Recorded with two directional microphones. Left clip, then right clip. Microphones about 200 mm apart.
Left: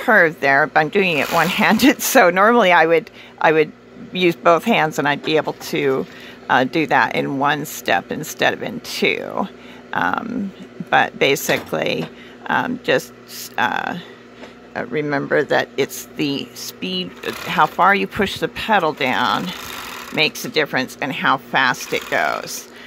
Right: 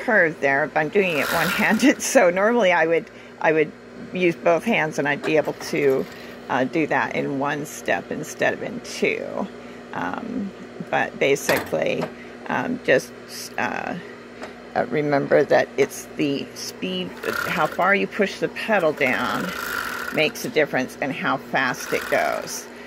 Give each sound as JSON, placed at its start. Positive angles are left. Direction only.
{"t": 0.0, "sound": "speech", "side_deg": 30}
{"t": 14.7, "sound": "speech", "side_deg": 10}
{"t": 16.8, "sound": "speech", "side_deg": -5}
{"t": 17.2, "sound": "speech", "side_deg": 30}